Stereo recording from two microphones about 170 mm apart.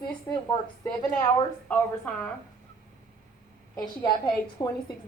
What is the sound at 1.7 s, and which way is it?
Speech, 10° left (ahead or behind).